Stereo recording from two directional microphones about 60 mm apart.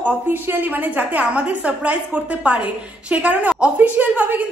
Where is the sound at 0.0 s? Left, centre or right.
Right.